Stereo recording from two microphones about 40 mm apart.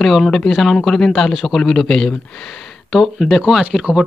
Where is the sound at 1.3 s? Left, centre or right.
Centre.